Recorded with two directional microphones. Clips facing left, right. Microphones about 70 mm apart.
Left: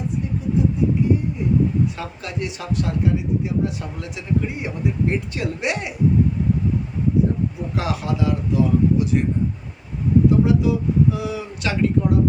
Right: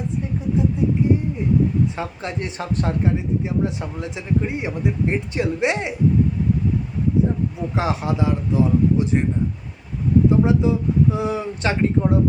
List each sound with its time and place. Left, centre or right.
2.0 s speech: right
7.8 s speech: right
10.2 s speech: right